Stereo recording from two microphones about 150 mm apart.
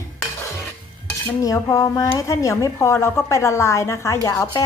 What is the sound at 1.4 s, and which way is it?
A woman's voice, 25° left (ahead or behind).